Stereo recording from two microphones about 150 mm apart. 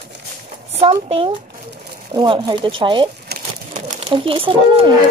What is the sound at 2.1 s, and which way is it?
Speech, 30° right (ahead or behind).